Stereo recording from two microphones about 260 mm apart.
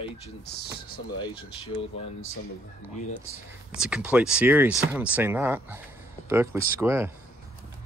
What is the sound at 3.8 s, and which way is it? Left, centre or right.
Speech, centre.